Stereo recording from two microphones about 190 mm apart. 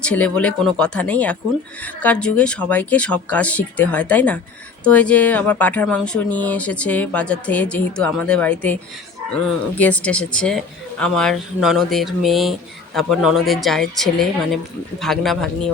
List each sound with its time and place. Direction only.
0.0 s speech: 5° left (ahead or behind)